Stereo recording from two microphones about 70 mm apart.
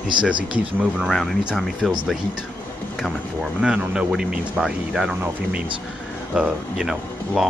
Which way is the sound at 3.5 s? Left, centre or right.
Centre.